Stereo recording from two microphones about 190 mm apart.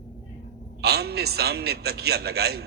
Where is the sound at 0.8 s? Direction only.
60° right (ahead or behind).